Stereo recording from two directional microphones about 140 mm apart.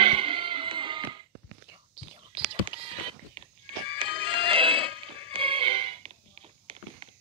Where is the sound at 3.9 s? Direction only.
40° right (ahead or behind).